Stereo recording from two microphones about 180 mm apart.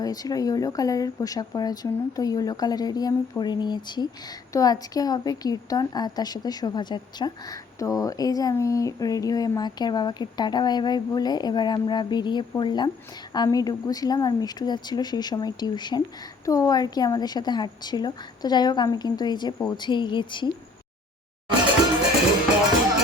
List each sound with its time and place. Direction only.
0.0 s speech: 20° left (ahead or behind)